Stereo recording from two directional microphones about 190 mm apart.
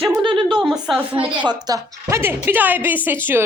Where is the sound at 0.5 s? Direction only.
Centre (ahead or behind).